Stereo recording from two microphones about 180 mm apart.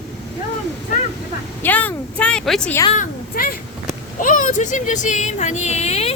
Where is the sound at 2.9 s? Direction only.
55° left (ahead or behind).